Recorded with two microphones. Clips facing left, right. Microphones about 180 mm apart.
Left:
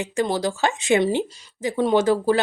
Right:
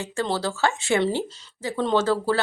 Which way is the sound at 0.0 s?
15° left (ahead or behind).